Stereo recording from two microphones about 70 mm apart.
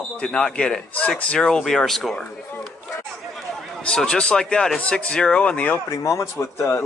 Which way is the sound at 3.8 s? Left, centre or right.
Centre.